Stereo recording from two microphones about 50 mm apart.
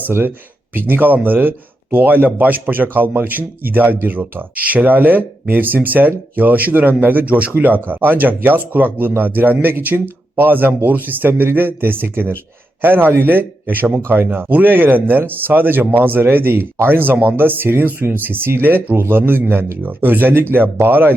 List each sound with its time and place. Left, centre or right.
0.1 s speech: right